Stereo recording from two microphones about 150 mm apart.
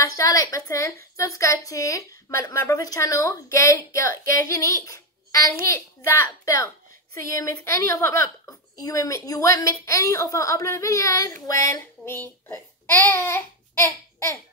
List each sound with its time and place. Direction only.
0.0 s a woman's voice: 20° left (ahead or behind)
4.3 s child singing: 20° left (ahead or behind)
6.0 s a woman's voice: 20° left (ahead or behind)